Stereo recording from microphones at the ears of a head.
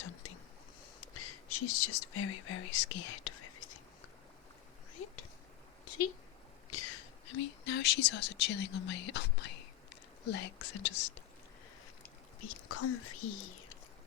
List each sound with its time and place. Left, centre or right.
0.0 s whispering: left
6.7 s speech: left